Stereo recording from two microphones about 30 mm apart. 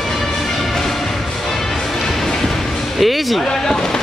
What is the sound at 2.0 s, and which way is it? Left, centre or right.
Music, centre.